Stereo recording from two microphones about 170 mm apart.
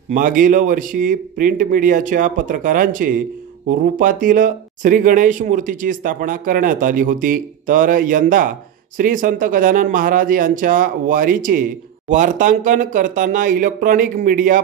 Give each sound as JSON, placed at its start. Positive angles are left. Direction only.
{"t": 0.1, "sound": "speech", "side_deg": -50}